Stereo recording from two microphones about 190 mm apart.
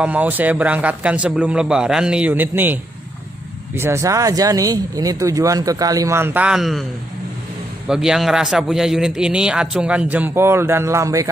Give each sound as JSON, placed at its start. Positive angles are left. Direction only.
{"t": 0.0, "sound": "speech", "side_deg": -10}
{"t": 7.9, "sound": "a man's voice", "side_deg": -5}